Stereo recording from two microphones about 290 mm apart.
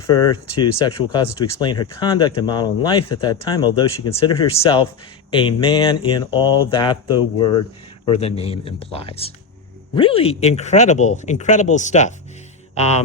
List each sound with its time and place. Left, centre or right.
0.1 s speech: centre